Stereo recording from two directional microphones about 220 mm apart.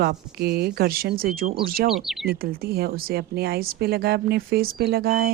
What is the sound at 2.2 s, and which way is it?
A woman's voice, 45° right (ahead or behind).